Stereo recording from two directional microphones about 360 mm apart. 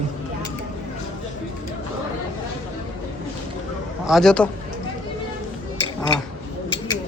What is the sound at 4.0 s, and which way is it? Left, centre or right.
Speech, centre.